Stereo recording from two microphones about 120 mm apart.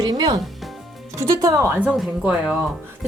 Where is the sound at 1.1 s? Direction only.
25° right (ahead or behind).